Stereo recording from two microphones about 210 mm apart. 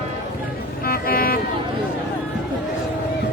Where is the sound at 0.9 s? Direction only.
45° left (ahead or behind).